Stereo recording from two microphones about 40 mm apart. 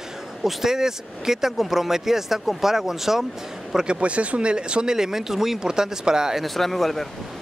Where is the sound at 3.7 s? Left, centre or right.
Centre.